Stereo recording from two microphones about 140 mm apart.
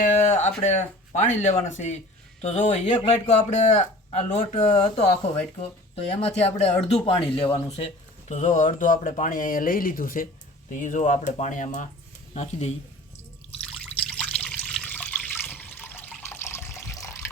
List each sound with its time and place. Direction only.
0.0 s a sound: 55° left (ahead or behind)
0.6 s a man's voice: 55° left (ahead or behind)
8.3 s speech: 60° left (ahead or behind); by 10.2 s 85° left
10.7 s speech: 65° left (ahead or behind)
12.3 s a man's voice: 50° left (ahead or behind)
13.7 s water: 5° left (ahead or behind)